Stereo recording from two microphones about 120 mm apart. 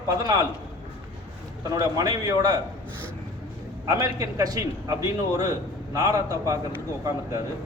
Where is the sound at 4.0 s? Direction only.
30° right (ahead or behind).